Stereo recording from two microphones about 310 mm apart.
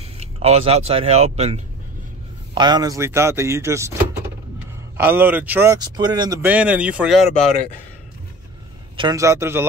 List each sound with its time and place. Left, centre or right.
0.0 s speech: centre
4.9 s speech: centre
8.9 s speech: centre